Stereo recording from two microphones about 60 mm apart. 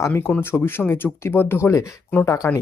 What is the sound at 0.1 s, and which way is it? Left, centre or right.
Speech, left.